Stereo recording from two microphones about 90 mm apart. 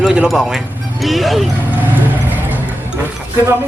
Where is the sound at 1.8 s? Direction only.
20° right (ahead or behind).